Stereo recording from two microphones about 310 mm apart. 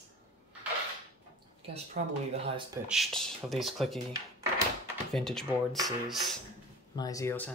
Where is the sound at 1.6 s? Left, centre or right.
Centre.